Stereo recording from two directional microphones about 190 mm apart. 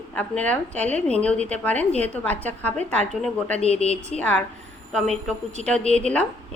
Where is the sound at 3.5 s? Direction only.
30° left (ahead or behind).